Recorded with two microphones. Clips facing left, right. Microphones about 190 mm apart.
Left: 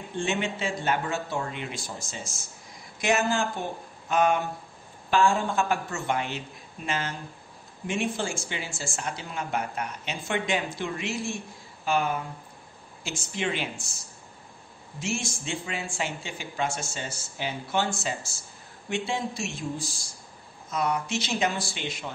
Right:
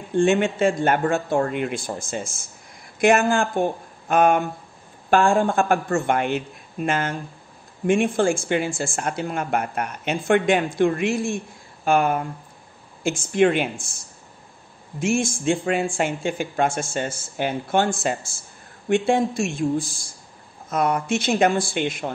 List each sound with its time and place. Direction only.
0.1 s speech: 50° right (ahead or behind)
15.0 s speech: 50° right (ahead or behind)